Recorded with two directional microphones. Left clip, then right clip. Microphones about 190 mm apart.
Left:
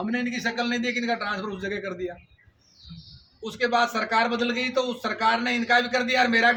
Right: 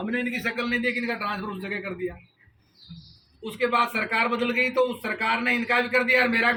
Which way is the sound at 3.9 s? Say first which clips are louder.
Left 1 dB; 15° left (ahead or behind).